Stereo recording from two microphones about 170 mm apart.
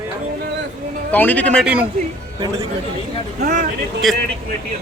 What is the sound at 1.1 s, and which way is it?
Speech, 10° left (ahead or behind).